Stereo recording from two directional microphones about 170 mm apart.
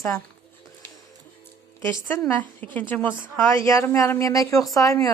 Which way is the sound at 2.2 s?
10° left (ahead or behind).